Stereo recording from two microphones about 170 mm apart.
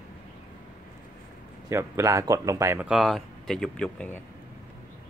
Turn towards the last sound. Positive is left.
turn(degrees=5)  # may be behind; listen again after turning